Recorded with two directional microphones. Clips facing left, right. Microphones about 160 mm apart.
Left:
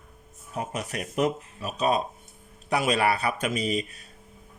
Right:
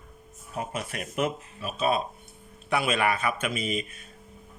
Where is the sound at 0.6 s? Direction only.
40° left (ahead or behind).